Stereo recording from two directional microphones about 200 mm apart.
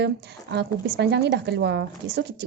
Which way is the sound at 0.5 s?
60° right (ahead or behind).